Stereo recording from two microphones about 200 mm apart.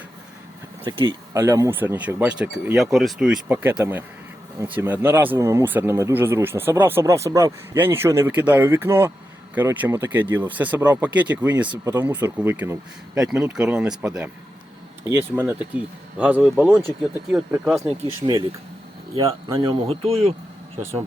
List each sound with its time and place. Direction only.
0.9 s speech: 20° right (ahead or behind); by 14.3 s 5° right (ahead or behind)
15.4 s speech: 5° right (ahead or behind)
18.2 s speech: 25° right (ahead or behind)
19.1 s speech: 15° right (ahead or behind)
19.9 s speech: 30° right (ahead or behind)